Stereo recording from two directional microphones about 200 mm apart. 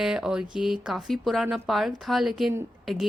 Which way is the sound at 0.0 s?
5° right (ahead or behind).